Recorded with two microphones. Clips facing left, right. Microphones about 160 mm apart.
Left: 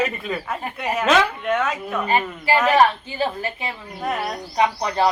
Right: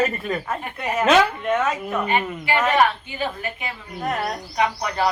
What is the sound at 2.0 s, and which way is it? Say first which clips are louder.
A woman's voice: left 4 dB; 35° left (ahead or behind).